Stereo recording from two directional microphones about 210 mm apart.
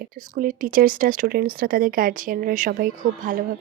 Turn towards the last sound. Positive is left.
turn(degrees=-40)  # may be behind; listen again after turning